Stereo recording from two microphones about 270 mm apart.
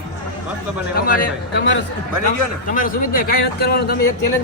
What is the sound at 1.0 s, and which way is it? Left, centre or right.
Speech, left.